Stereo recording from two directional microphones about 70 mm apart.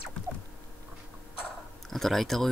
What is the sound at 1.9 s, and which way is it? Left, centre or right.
Speech, centre.